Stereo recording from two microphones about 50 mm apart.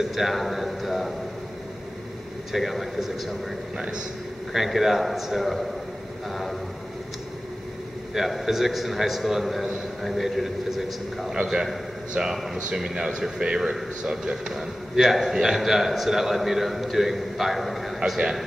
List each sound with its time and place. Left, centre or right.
0.0 s a man's voice: centre
2.5 s a man's voice: centre
3.7 s speech: centre
4.6 s a man's voice: centre
8.1 s a man's voice: centre